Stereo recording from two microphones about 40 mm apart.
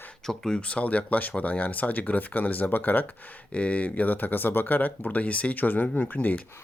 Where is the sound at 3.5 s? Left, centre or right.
Left.